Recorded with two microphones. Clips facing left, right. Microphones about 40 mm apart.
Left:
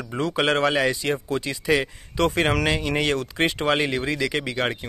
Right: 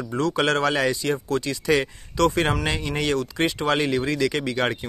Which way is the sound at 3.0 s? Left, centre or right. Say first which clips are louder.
Even; left.